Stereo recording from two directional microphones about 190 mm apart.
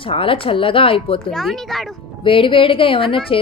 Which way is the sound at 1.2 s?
Centre (ahead or behind).